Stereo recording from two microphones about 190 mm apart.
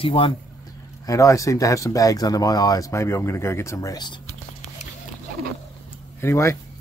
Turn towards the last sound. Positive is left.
turn(degrees=15)  # may be behind; listen again after turning